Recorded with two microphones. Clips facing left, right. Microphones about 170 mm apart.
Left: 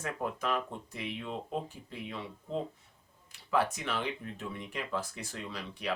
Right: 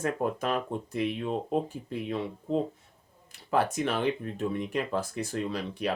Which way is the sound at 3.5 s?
45° right (ahead or behind).